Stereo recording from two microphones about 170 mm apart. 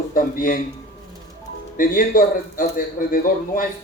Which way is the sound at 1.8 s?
55° left (ahead or behind).